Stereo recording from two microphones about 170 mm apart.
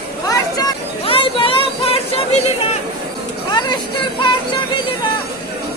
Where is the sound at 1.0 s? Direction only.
30° left (ahead or behind).